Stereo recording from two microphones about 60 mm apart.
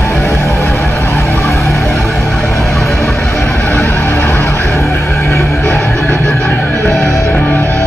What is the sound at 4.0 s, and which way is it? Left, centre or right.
Music, left.